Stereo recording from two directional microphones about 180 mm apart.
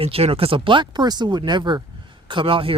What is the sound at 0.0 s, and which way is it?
Speech, 35° right (ahead or behind).